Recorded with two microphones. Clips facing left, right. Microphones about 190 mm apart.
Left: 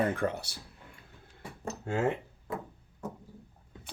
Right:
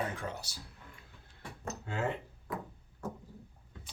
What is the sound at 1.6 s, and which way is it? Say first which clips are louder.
Speech: left 5 dB; 45° left (ahead or behind).